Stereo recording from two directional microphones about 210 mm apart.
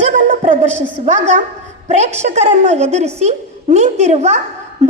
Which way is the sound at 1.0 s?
35° right (ahead or behind).